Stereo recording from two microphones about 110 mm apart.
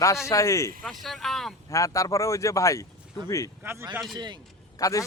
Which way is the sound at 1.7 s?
30° left (ahead or behind).